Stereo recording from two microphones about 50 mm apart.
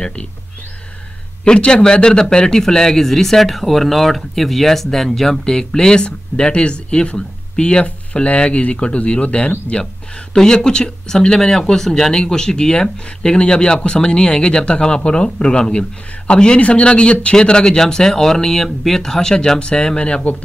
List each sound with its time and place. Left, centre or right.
0.0 s speech: left
1.4 s a man's voice: centre